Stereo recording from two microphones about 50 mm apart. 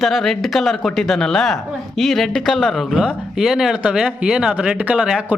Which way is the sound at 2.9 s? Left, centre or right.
Centre.